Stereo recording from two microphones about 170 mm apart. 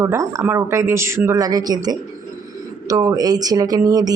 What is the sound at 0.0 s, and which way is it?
Speech, 20° right (ahead or behind).